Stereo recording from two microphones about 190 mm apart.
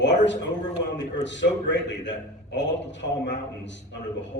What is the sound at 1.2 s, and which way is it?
A man's voice, 70° left (ahead or behind).